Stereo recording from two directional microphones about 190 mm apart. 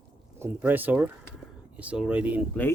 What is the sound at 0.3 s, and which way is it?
Speech, 10° right (ahead or behind).